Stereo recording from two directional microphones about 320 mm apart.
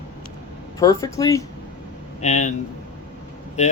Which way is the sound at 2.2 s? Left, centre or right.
Left.